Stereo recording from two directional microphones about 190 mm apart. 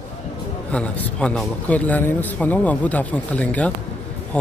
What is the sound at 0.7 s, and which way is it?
A man's voice, 5° left (ahead or behind).